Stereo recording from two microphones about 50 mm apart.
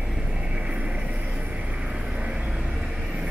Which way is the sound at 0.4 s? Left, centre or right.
Right.